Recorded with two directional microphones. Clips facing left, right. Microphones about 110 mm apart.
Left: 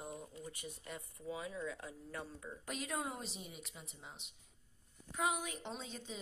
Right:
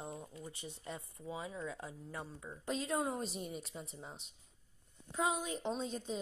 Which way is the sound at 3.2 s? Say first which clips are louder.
Right 7 dB; 45° right (ahead or behind).